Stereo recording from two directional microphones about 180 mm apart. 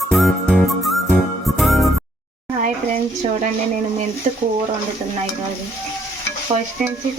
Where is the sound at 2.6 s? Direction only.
45° right (ahead or behind).